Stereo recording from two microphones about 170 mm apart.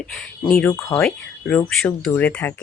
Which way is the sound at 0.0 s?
5° left (ahead or behind).